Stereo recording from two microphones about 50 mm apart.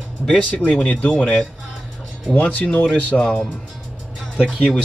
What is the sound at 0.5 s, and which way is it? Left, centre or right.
Speech, left.